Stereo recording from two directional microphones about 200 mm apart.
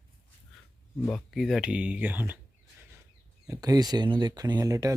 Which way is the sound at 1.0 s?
Centre (ahead or behind).